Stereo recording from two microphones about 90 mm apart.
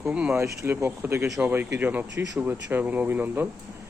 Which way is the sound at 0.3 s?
30° right (ahead or behind).